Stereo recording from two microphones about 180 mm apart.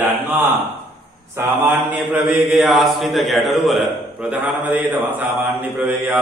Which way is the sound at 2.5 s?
Centre (ahead or behind).